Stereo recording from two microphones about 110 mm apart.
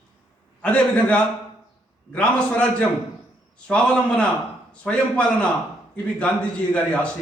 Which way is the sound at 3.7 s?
10° left (ahead or behind).